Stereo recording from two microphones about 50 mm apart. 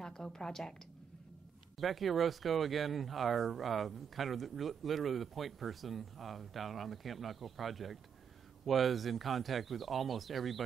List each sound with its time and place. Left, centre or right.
0.0 s a woman's voice: centre
1.8 s speech: centre